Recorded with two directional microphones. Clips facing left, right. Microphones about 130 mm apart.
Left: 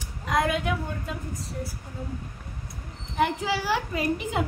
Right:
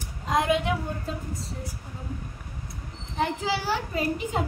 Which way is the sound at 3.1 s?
30° right (ahead or behind).